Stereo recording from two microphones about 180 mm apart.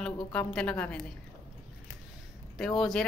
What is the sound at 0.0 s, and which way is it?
A woman's voice, 5° left (ahead or behind).